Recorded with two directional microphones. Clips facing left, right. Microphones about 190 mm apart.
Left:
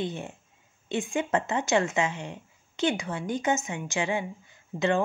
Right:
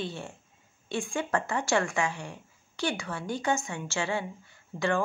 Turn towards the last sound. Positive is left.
turn(degrees=20)  # may be behind; listen again after turning